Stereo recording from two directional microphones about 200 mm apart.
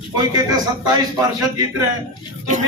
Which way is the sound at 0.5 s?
20° right (ahead or behind).